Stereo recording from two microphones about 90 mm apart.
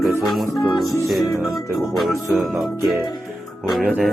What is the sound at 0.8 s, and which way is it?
Music, 35° left (ahead or behind).